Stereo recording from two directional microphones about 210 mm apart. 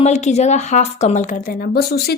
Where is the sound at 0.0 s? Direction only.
35° left (ahead or behind).